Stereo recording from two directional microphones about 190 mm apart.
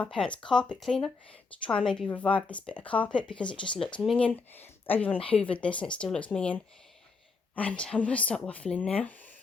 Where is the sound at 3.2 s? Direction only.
25° left (ahead or behind).